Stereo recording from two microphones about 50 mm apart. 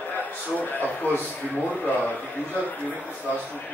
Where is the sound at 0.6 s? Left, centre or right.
Left.